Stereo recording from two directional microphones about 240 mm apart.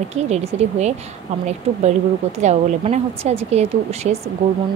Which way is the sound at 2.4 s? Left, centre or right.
Right.